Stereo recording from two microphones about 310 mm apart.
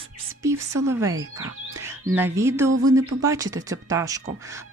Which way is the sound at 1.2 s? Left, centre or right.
Right.